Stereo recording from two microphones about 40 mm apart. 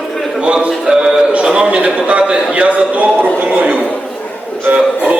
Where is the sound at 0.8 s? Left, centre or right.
Centre.